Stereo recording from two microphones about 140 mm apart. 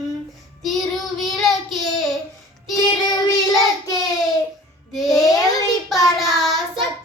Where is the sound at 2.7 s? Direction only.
25° left (ahead or behind).